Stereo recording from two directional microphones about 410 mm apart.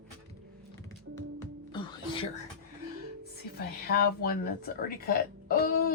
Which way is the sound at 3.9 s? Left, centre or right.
Left.